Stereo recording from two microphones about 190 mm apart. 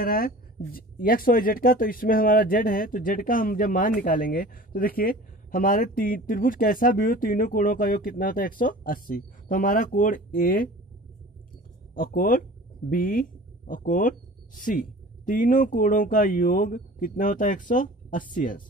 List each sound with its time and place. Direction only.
0.0 s speech: 50° left (ahead or behind)
11.9 s speech: 45° left (ahead or behind)